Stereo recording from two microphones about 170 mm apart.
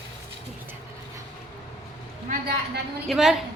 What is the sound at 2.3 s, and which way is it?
Speech, 65° right (ahead or behind).